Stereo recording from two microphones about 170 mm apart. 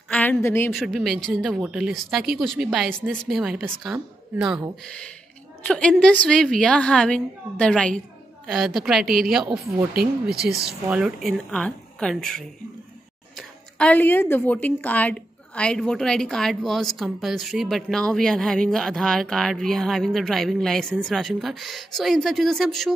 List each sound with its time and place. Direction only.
0.1 s a woman's voice: 10° left (ahead or behind)
0.7 s a woman's voice: centre (ahead or behind)
4.8 s a woman's voice: 5° left (ahead or behind)
10.3 s speech: 70° right (ahead or behind)
10.7 s a woman's voice: 5° right (ahead or behind)